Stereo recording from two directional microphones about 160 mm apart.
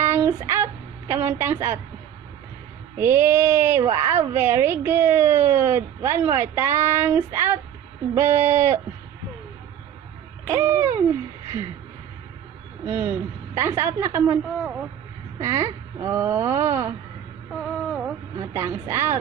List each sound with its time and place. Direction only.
0.0 s a sound: 15° right (ahead or behind)
3.0 s a woman's voice: 15° right (ahead or behind)
10.5 s hoot: 15° right (ahead or behind)
12.8 s a woman's voice: 10° right (ahead or behind)
15.4 s a woman's voice: 20° right (ahead or behind)
17.5 s a sound: 5° right (ahead or behind)
18.3 s a woman's voice: 15° right (ahead or behind)